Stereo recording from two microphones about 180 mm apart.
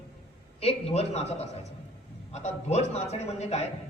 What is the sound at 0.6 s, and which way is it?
A man's voice, 35° left (ahead or behind).